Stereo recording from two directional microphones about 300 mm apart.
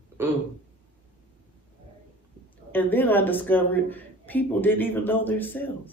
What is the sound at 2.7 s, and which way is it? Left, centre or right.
A woman's voice, centre.